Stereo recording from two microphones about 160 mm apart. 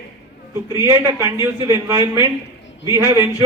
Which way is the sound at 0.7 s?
20° right (ahead or behind).